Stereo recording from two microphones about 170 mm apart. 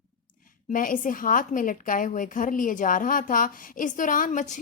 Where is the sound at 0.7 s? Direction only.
50° left (ahead or behind).